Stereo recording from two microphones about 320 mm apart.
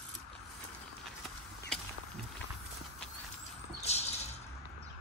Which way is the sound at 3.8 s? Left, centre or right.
Centre.